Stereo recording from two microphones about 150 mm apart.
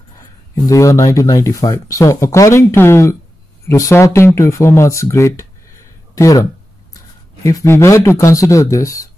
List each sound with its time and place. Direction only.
0.6 s speech: 20° left (ahead or behind)
7.4 s speech: 20° left (ahead or behind)